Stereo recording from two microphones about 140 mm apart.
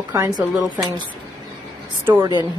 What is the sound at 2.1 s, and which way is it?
Speech, 20° right (ahead or behind).